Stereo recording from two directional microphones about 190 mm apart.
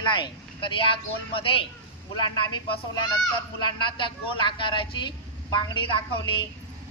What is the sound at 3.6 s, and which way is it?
Speech, 25° left (ahead or behind).